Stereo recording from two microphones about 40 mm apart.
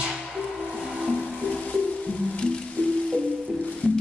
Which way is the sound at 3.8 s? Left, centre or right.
Left.